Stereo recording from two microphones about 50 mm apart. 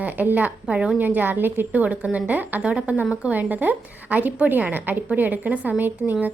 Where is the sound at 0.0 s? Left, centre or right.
Right.